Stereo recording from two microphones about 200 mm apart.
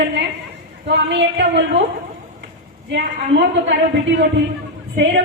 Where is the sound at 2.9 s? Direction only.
60° right (ahead or behind).